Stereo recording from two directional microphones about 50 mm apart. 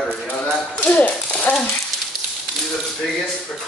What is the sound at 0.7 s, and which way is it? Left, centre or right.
Speech, left.